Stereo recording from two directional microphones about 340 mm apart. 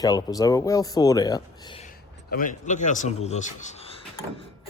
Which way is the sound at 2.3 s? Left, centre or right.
Left.